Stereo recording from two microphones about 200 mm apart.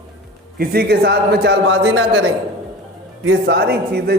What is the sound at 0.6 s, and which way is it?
Speech, 50° right (ahead or behind).